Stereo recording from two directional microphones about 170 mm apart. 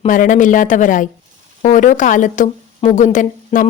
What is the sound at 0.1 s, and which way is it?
A woman's voice, 50° left (ahead or behind).